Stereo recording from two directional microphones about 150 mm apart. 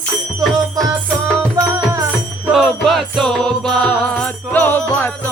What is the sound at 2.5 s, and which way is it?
Music, centre (ahead or behind).